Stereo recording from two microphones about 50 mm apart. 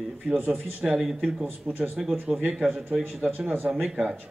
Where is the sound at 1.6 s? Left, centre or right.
Right.